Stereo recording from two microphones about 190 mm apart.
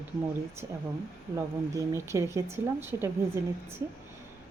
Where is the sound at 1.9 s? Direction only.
15° right (ahead or behind).